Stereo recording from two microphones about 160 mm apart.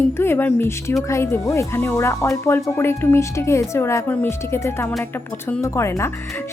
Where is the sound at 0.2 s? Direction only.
15° left (ahead or behind).